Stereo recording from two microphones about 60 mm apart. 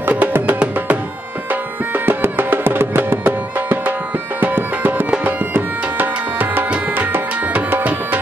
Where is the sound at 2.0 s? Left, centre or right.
Right.